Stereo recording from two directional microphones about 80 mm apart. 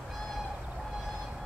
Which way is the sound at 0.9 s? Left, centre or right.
Centre.